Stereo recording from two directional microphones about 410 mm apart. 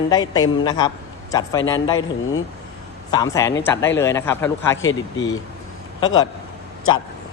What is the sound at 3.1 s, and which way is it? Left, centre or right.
Speech, centre.